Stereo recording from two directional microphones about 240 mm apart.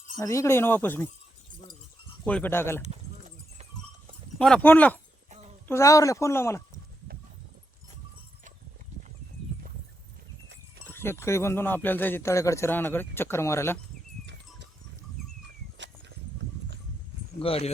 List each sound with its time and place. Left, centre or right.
0.2 s speech: centre
2.2 s speech: centre
2.8 s livestock: right
4.4 s speech: centre
10.8 s speech: centre
15.8 s a sound: right
17.4 s speech: left